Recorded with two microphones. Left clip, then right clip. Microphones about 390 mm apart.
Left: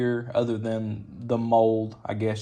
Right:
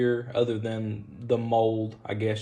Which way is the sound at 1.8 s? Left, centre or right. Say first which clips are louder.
Left 1 dB; centre.